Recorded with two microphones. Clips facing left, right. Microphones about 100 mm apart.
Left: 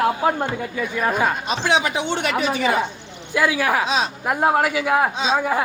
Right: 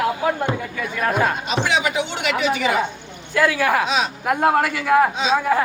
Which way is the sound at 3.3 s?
10° left (ahead or behind).